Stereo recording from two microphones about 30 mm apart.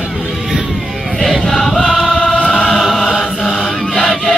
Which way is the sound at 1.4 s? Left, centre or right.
Centre.